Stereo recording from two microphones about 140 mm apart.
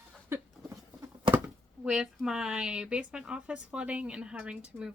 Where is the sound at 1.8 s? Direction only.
5° right (ahead or behind).